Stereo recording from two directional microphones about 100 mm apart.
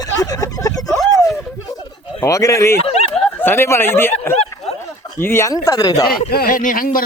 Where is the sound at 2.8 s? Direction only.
80° left.